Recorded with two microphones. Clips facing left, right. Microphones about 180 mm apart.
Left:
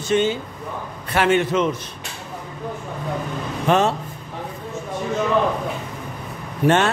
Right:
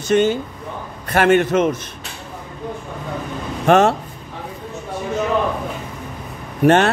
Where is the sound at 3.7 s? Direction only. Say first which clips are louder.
Right 5 dB; 50° right (ahead or behind).